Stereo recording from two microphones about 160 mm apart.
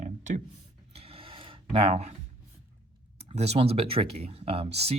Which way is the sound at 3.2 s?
40° right (ahead or behind).